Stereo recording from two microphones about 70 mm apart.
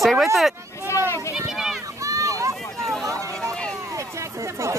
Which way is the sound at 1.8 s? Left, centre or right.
Right.